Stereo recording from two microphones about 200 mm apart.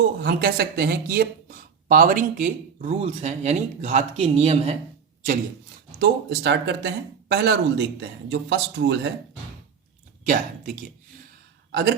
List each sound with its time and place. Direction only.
0.2 s speech: 50° right (ahead or behind); by 4.8 s 30° right (ahead or behind)
6.0 s speech: 60° right (ahead or behind)
10.2 s speech: 40° right (ahead or behind)
11.7 s speech: 55° right (ahead or behind)